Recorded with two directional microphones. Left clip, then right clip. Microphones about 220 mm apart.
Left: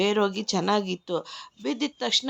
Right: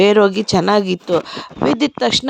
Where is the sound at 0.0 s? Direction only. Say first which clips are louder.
Right 12 dB; 35° right (ahead or behind).